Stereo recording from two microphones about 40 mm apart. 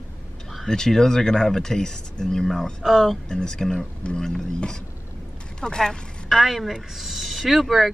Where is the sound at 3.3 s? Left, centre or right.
Centre.